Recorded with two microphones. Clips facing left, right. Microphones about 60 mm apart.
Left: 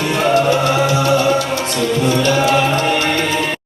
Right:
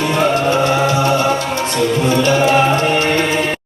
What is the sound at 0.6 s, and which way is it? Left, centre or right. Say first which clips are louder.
Music: right 1 dB; right.